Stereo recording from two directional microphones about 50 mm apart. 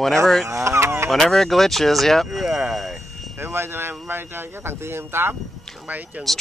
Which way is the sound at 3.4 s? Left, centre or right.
Right.